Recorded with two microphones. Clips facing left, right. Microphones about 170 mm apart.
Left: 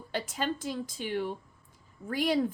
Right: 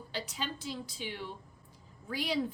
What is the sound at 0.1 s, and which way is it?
A woman's voice, 50° left (ahead or behind).